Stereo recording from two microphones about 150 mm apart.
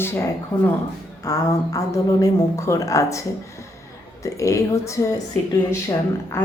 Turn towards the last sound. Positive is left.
turn(degrees=20)  # may be behind; listen again after turning